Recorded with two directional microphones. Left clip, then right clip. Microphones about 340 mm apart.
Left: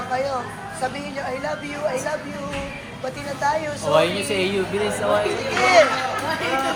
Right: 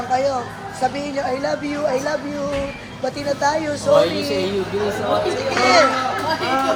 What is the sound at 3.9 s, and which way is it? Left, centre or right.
Speech, left.